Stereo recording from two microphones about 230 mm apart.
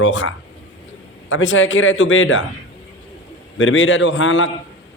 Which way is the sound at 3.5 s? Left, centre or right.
Left.